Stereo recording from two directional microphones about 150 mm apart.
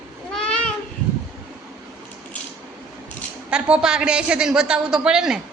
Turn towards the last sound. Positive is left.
turn(degrees=-5)  # may be behind; listen again after turning